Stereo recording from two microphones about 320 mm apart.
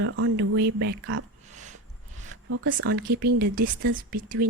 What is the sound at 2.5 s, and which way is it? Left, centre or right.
A woman's voice, right.